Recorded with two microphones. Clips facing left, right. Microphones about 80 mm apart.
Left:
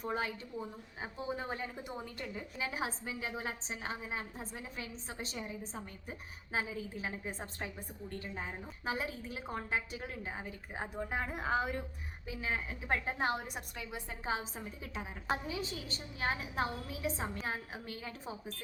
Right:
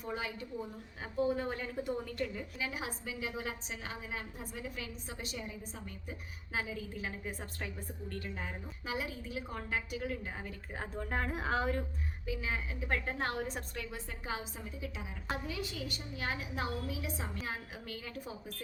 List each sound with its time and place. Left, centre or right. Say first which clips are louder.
0.0 s a woman's voice: left 3 dB; left
1.4 s a woman's voice: right 3 dB; left
2.6 s a woman's voice: left 3 dB; left; by 11.9 s centre
12.2 s a woman's voice: even; left
13.1 s a woman's voice: left 1 dB; centre
14.3 s a woman's voice: left 3 dB; left